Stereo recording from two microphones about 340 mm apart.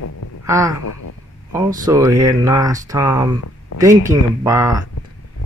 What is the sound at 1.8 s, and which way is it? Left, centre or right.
Speech, centre.